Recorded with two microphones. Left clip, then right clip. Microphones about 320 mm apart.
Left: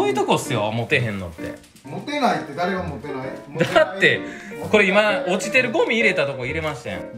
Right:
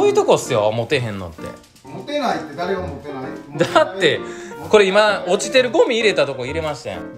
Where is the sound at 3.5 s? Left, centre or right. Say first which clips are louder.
Right 2 dB; centre.